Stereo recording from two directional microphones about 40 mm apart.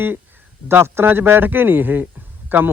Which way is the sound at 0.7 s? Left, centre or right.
Right.